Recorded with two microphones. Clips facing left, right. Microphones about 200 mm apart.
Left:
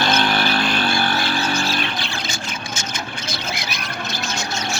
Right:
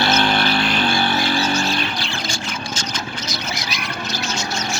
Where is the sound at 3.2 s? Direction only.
55° left (ahead or behind).